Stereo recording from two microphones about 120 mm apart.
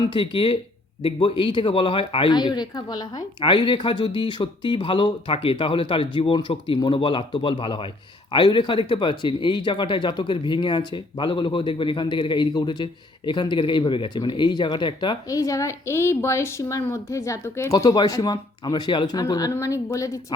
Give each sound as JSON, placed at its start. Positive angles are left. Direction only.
{"t": 0.0, "sound": "a man's voice", "side_deg": 45}